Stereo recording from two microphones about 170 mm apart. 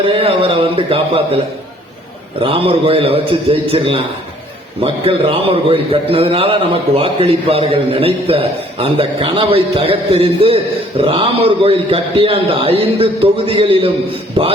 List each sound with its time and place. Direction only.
0.1 s a man's voice: 35° right (ahead or behind)
2.4 s a man's voice: 30° right (ahead or behind)